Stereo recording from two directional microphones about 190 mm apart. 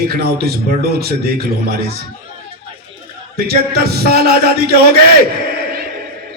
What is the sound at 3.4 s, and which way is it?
A man's voice, 55° right (ahead or behind).